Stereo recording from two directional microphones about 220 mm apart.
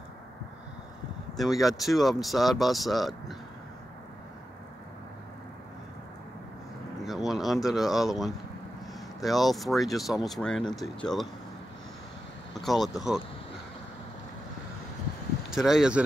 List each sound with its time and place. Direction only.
1.3 s speech: centre (ahead or behind)
7.1 s a sound: centre (ahead or behind)
9.2 s speech: centre (ahead or behind)
12.6 s speech: centre (ahead or behind)
15.5 s speech: centre (ahead or behind)